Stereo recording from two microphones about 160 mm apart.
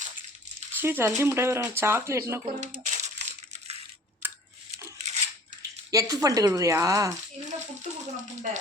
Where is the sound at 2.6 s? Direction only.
50° right (ahead or behind).